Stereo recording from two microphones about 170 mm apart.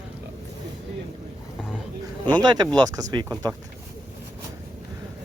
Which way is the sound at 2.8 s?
20° right (ahead or behind).